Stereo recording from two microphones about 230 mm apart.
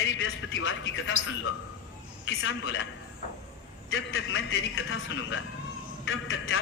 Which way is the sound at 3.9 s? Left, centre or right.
Left.